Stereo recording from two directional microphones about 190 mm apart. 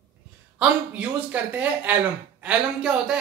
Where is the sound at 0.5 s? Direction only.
5° right (ahead or behind).